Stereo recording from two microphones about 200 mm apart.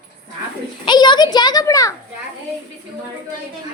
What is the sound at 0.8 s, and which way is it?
A child's voice, 20° left (ahead or behind).